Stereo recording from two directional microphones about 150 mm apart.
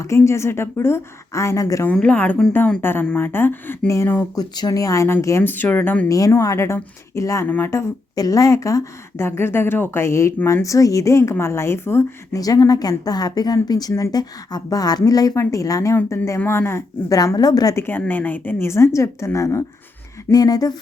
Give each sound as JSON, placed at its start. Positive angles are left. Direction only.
{"t": 0.0, "sound": "speech", "side_deg": 20}
{"t": 1.9, "sound": "a woman's voice", "side_deg": 10}
{"t": 6.1, "sound": "speech", "side_deg": 20}